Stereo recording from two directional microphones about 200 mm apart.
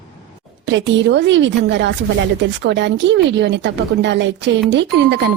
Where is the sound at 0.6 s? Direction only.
65° right (ahead or behind).